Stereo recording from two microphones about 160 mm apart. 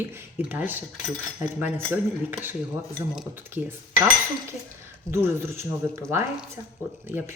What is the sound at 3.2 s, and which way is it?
Speech, 10° right (ahead or behind).